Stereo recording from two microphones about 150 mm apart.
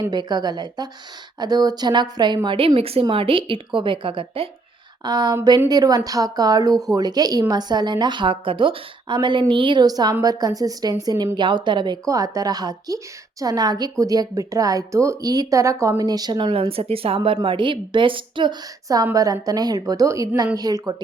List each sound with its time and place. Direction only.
0.0 s speech: 30° right (ahead or behind)